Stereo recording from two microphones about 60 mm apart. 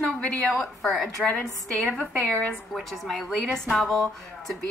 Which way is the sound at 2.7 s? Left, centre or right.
Centre.